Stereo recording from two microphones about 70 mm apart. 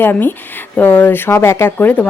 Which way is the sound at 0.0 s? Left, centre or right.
Left.